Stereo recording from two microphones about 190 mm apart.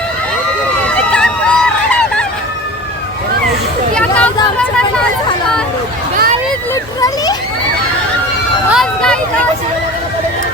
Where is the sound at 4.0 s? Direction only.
5° left (ahead or behind).